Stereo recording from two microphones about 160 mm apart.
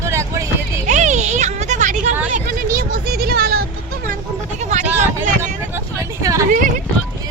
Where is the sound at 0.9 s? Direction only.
45° right (ahead or behind).